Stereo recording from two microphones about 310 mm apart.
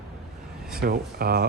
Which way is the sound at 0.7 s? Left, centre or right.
Right.